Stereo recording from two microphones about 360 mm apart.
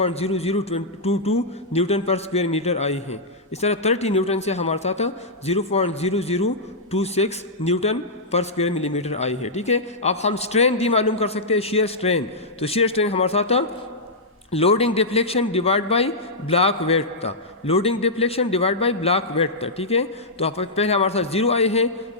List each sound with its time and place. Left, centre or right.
0.0 s a man's voice: centre